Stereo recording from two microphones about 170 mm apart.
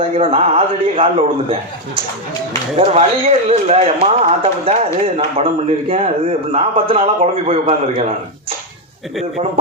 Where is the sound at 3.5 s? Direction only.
40° right (ahead or behind).